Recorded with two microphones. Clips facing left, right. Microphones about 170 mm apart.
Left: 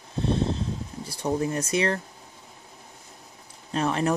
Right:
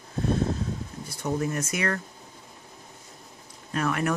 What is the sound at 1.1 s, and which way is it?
Speech, 30° left (ahead or behind).